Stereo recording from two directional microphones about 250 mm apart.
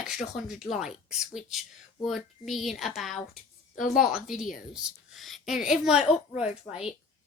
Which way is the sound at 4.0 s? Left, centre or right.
Centre.